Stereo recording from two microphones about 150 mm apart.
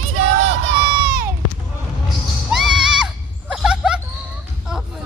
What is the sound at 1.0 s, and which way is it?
Run, 75° right (ahead or behind).